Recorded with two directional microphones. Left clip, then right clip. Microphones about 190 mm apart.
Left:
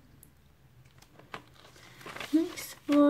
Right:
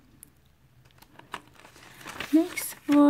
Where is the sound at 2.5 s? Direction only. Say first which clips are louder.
Right 7 dB; 45° right (ahead or behind).